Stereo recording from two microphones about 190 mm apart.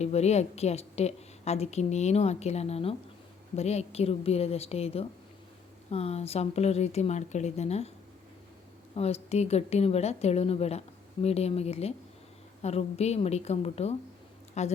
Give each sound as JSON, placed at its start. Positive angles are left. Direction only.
{"t": 0.0, "sound": "a woman's voice", "side_deg": 35}
{"t": 9.0, "sound": "a woman's voice", "side_deg": 35}